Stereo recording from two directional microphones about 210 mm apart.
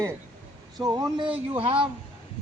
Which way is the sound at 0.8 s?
20° right (ahead or behind).